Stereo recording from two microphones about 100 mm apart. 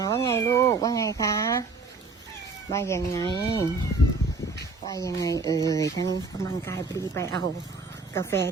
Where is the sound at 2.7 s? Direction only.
30° left (ahead or behind).